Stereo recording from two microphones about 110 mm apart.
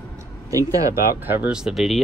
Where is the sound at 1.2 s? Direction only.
10° right (ahead or behind).